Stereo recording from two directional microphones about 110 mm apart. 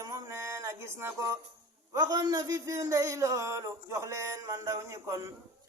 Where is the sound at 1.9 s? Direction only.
35° right (ahead or behind).